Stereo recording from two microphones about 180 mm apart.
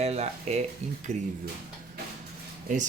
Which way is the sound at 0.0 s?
35° right (ahead or behind).